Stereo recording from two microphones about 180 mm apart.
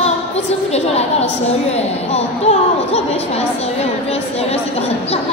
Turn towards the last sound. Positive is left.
turn(degrees=35)  # may be behind; listen again after turning